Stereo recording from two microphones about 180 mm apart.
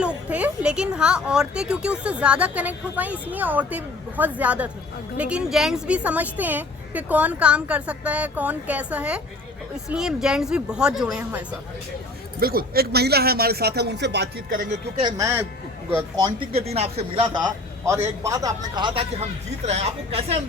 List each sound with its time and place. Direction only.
0.3 s speech: 10° right (ahead or behind)
12.4 s a man's voice: 55° right (ahead or behind)
15.0 s speech: 15° right (ahead or behind)
16.2 s a man's voice: 35° right (ahead or behind)